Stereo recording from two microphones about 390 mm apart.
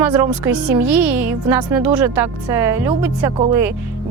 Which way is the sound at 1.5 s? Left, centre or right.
Centre.